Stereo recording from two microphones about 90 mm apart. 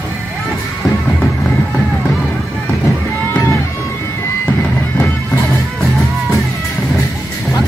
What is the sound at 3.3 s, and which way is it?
Music, 20° left (ahead or behind).